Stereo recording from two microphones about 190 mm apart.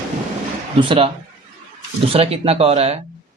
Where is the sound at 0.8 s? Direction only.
25° right (ahead or behind).